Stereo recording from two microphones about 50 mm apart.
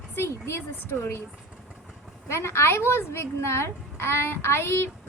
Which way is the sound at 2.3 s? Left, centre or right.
Left.